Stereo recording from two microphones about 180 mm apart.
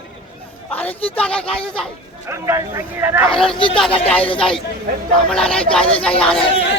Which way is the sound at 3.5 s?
30° left (ahead or behind).